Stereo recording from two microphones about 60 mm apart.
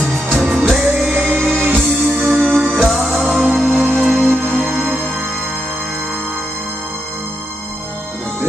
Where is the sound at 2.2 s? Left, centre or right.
Right.